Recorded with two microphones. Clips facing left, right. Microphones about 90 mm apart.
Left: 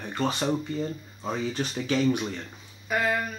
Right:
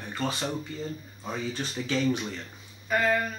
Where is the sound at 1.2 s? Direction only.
20° left (ahead or behind).